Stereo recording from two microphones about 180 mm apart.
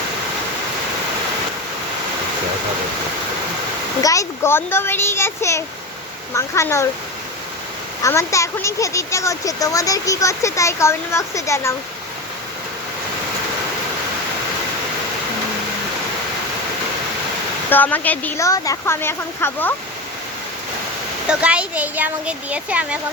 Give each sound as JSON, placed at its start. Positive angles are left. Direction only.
{"t": 4.0, "sound": "speech", "side_deg": 15}
{"t": 8.0, "sound": "speech", "side_deg": 15}
{"t": 17.7, "sound": "speech", "side_deg": 10}
{"t": 21.2, "sound": "speech", "side_deg": -5}